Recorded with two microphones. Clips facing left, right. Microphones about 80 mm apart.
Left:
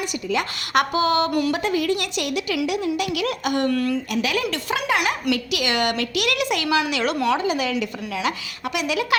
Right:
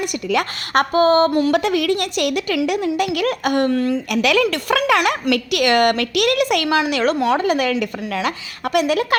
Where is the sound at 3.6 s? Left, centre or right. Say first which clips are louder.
Right 3 dB; right.